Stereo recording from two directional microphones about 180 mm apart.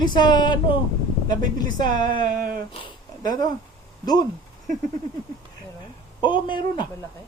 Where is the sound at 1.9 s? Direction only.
45° right (ahead or behind).